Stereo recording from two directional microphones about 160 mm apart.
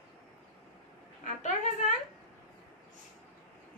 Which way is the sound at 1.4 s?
45° left (ahead or behind).